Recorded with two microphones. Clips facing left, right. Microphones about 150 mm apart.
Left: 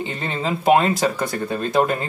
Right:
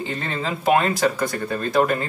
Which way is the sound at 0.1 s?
20° left (ahead or behind).